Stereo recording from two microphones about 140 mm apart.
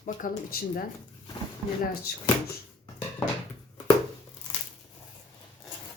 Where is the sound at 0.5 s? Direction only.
90° left.